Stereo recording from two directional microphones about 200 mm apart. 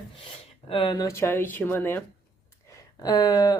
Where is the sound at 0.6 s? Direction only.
25° left (ahead or behind).